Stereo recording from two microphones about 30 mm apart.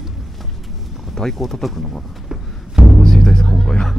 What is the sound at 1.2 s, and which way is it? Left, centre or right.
Speech, centre.